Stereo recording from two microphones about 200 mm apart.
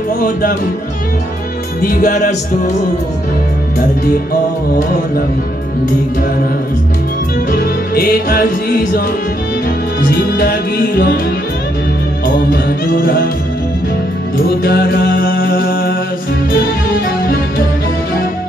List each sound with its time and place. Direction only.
1.8 s music: 45° left (ahead or behind)
7.5 s music: 50° left (ahead or behind)
10.3 s music: 50° left (ahead or behind)
12.9 s music: 45° left (ahead or behind)
14.6 s music: 50° left (ahead or behind)